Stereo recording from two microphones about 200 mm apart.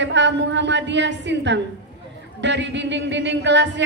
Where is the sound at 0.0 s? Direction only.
60° right (ahead or behind).